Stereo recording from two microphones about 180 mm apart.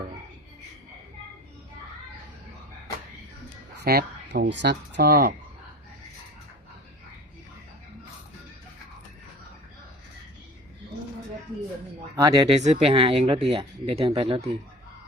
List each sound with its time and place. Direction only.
3.8 s speech: 65° right (ahead or behind)
12.1 s speech: 20° right (ahead or behind)
12.5 s speech: 35° right (ahead or behind)